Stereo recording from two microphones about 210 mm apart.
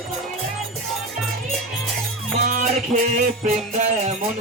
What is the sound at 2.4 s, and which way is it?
Music, 35° right (ahead or behind).